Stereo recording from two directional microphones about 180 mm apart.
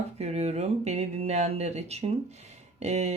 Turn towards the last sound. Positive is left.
turn(degrees=-40)  # may be behind; listen again after turning